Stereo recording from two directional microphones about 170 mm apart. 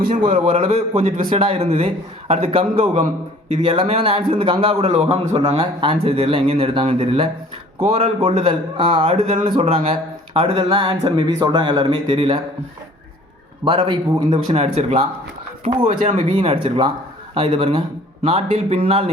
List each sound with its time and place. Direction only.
0.3 s a man's voice: 45° right (ahead or behind)
1.3 s a man's voice: 35° right (ahead or behind)
13.7 s a man's voice: 30° right (ahead or behind)